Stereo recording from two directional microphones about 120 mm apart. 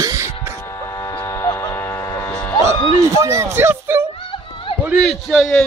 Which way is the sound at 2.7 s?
40° left (ahead or behind).